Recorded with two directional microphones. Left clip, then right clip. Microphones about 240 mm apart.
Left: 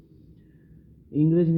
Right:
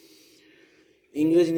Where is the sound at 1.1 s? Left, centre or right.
Centre.